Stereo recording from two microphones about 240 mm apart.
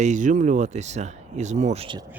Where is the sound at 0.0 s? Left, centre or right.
Right.